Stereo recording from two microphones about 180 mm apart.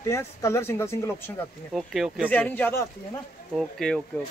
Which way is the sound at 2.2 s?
10° left (ahead or behind).